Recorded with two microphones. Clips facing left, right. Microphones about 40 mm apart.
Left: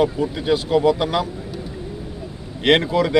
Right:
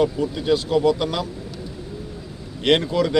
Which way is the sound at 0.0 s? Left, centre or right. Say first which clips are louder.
Left 1 dB; centre.